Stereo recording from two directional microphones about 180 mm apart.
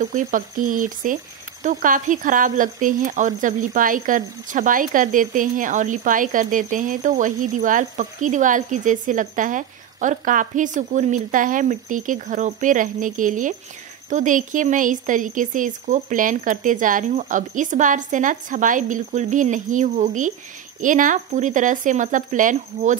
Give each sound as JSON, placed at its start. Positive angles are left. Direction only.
{"t": 0.0, "sound": "speech", "side_deg": -45}